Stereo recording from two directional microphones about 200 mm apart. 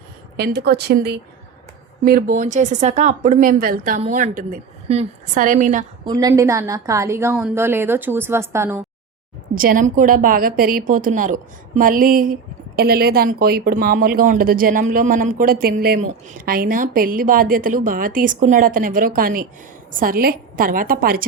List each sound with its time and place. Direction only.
0.3 s speech: 55° right (ahead or behind); by 5.8 s 40° right (ahead or behind)
6.1 s a woman's voice: 20° right (ahead or behind)
9.6 s a woman's voice: 45° right (ahead or behind)